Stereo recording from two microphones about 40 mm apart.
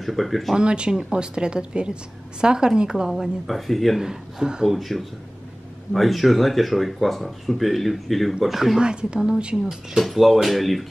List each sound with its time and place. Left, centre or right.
0.0 s speech: centre
0.6 s a woman's voice: right
3.4 s speech: centre
4.0 s speech: centre
4.6 s speech: centre
8.7 s a woman's voice: right
10.0 s speech: centre